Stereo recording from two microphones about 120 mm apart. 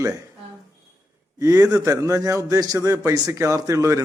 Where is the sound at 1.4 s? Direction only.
25° right (ahead or behind).